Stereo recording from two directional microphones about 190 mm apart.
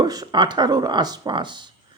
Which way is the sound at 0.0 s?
20° right (ahead or behind).